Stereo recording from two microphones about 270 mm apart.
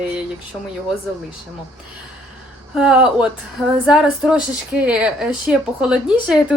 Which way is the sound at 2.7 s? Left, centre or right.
Centre.